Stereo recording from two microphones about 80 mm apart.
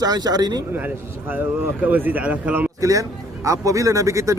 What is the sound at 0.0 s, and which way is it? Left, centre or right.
Speech, right.